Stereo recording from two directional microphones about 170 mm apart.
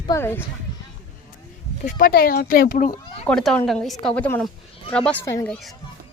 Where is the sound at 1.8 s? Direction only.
55° left (ahead or behind).